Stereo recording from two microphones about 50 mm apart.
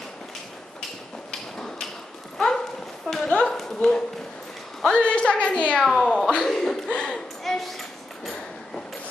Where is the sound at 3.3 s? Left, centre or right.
Centre.